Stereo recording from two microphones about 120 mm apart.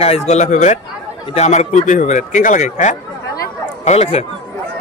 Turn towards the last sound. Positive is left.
turn(degrees=60)  # may be behind; listen again after turning